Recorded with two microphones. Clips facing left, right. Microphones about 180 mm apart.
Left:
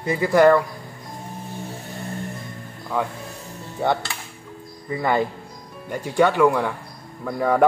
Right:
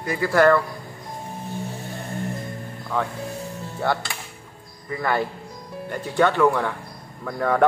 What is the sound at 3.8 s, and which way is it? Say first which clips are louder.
Speech: left 2 dB; 15° left (ahead or behind).